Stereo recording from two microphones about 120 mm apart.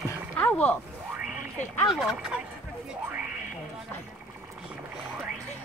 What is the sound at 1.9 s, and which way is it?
Speech, 5° right (ahead or behind).